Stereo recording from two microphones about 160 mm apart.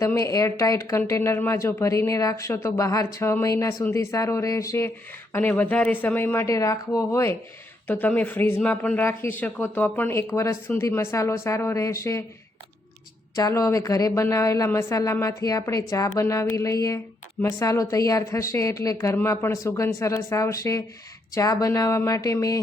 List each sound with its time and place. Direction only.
0.0 s speech: 20° left (ahead or behind)
13.3 s speech: 20° left (ahead or behind)